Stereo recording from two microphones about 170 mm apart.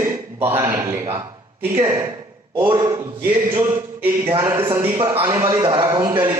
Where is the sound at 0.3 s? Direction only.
15° right (ahead or behind).